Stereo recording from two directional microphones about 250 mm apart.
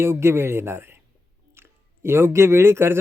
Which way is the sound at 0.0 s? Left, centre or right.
Centre.